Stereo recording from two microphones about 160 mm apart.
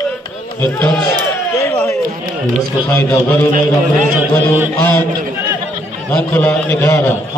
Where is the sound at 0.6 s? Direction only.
10° left (ahead or behind).